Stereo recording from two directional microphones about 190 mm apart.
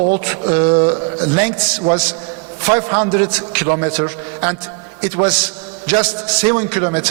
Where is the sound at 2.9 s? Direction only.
35° right (ahead or behind).